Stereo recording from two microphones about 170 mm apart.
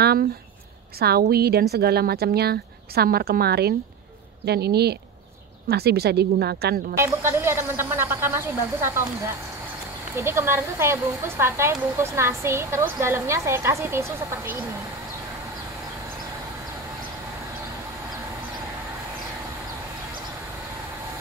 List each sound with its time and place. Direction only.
0.0 s a sound: 65° right (ahead or behind)
0.9 s a woman's voice: 65° right (ahead or behind)
7.0 s speech: 15° right (ahead or behind)
10.1 s speech: 15° right (ahead or behind)